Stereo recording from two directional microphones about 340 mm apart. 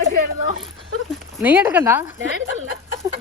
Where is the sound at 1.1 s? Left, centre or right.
Centre.